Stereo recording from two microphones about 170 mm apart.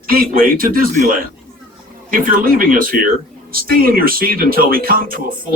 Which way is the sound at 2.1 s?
55° right (ahead or behind).